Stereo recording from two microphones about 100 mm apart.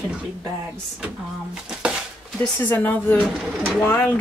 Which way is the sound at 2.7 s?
20° left (ahead or behind).